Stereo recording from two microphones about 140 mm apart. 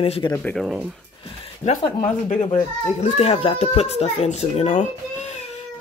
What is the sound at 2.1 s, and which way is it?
Speech, 60° left (ahead or behind).